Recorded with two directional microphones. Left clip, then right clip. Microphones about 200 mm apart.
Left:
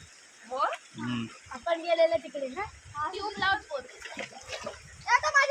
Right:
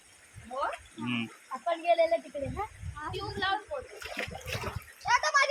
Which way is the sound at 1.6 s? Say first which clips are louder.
Left 1 dB; 35° left (ahead or behind).